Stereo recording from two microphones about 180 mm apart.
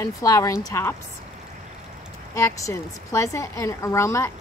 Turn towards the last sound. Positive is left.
turn(degrees=15)  # may be behind; listen again after turning